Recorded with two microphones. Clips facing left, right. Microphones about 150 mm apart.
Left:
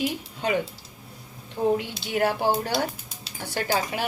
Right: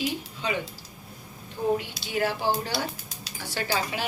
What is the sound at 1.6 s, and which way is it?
Speech, 55° left (ahead or behind).